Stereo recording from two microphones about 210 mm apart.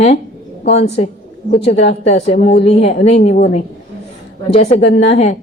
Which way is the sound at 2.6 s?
30° left (ahead or behind).